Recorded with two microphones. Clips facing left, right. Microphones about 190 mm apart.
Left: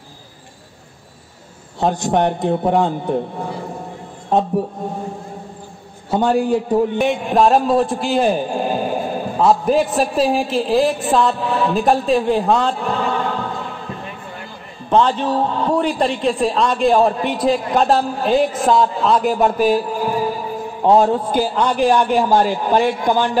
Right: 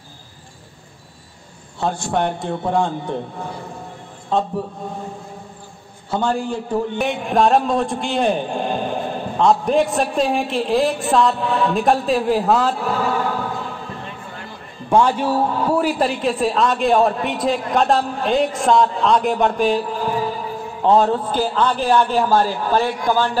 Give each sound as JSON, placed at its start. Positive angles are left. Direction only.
{"t": 1.8, "sound": "a man's voice", "side_deg": 20}
{"t": 4.3, "sound": "speech", "side_deg": 20}
{"t": 6.0, "sound": "a man's voice", "side_deg": 15}
{"t": 7.0, "sound": "a man's voice", "side_deg": 0}
{"t": 14.9, "sound": "a man's voice", "side_deg": -10}